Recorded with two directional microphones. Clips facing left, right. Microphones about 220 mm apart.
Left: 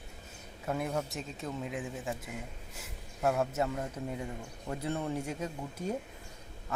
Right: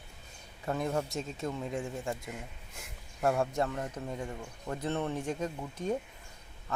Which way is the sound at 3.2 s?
Centre (ahead or behind).